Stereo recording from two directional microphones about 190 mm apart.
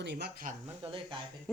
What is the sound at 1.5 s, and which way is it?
Speech, centre (ahead or behind).